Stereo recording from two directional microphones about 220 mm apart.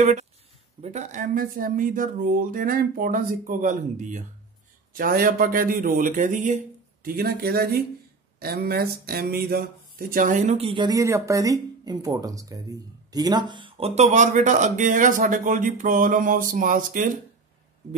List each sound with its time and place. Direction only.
0.7 s speech: 30° right (ahead or behind)